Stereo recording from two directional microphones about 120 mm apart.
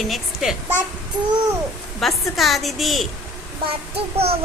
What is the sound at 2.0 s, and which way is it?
A woman's voice, centre (ahead or behind).